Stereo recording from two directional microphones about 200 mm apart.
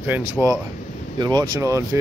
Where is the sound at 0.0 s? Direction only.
10° right (ahead or behind).